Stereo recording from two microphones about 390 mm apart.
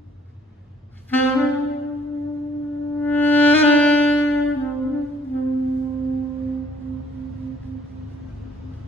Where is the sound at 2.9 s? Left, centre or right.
Centre.